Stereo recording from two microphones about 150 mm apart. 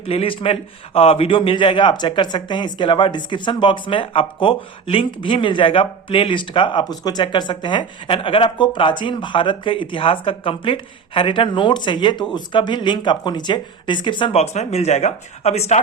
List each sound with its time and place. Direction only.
0.1 s a man's voice: 40° left (ahead or behind)